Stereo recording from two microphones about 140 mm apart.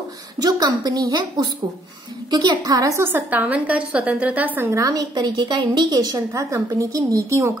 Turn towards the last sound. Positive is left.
turn(degrees=-20)  # may be behind; listen again after turning